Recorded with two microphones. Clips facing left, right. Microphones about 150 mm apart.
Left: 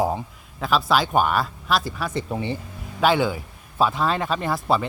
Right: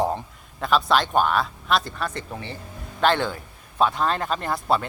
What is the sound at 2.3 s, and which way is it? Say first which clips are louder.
A man's voice: left 7 dB; 15° left (ahead or behind).